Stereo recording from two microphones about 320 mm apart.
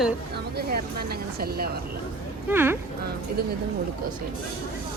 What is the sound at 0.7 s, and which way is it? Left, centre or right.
Speech, right.